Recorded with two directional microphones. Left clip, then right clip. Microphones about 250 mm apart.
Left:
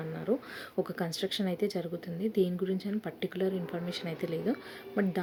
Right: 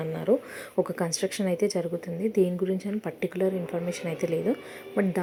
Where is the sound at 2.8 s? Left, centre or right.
Centre.